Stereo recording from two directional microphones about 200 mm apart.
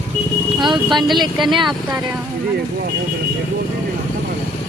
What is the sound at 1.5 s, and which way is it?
Speech, 25° right (ahead or behind).